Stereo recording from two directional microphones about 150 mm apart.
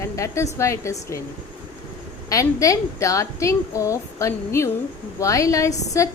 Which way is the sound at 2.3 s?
20° left (ahead or behind).